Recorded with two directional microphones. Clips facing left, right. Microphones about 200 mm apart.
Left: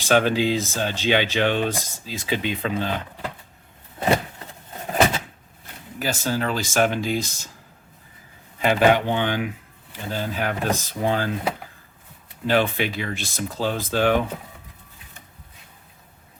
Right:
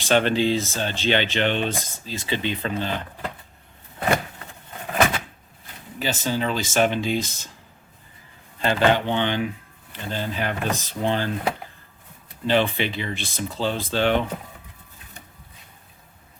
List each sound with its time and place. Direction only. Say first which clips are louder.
0.0 s speech: left 1 dB; 5° left (ahead or behind)
1.7 s speech: even; 15° right (ahead or behind)
2.0 s speech: left 1 dB; 10° left (ahead or behind)
4.0 s vehicle: left 2 dB; 25° left (ahead or behind)
4.9 s a sound: left 1 dB; 25° left (ahead or behind)
6.0 s speech: even; centre (ahead or behind)
8.5 s speech: left 2 dB; 10° left (ahead or behind)
12.5 s speech: even; 5° left (ahead or behind)